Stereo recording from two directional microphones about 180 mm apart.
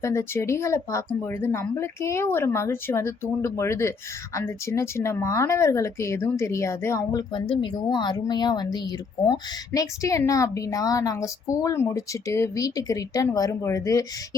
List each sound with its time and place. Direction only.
0.0 s speech: 15° left (ahead or behind)